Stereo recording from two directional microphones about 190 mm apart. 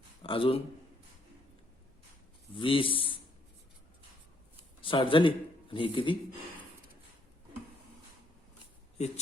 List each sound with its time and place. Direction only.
0.2 s a man's voice: 30° left (ahead or behind)
2.6 s speech: 25° left (ahead or behind)
4.8 s speech: 25° left (ahead or behind)